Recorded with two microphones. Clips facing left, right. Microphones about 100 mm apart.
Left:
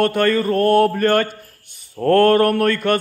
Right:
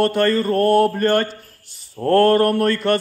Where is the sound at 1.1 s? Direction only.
55° left (ahead or behind).